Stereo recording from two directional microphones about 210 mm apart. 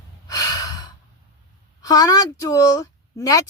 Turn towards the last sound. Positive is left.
turn(degrees=15)  # may be behind; listen again after turning